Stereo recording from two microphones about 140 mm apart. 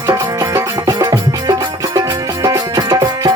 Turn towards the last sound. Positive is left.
turn(degrees=-30)  # may be behind; listen again after turning